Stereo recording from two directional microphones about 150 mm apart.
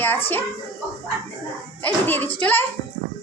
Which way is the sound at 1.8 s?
15° left (ahead or behind).